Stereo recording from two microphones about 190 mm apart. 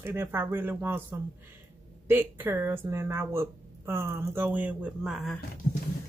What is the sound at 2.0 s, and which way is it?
Speech, 10° right (ahead or behind).